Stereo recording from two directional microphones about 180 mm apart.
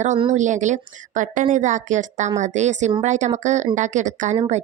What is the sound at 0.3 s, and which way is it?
A woman's voice, 45° right (ahead or behind).